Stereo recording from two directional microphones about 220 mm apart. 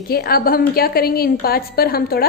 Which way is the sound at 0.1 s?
45° left (ahead or behind).